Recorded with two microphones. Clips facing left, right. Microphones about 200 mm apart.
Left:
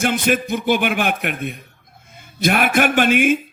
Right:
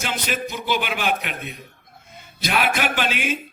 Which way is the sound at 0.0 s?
50° left (ahead or behind).